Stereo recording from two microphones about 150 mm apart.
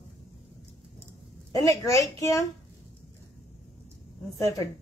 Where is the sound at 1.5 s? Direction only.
20° left (ahead or behind).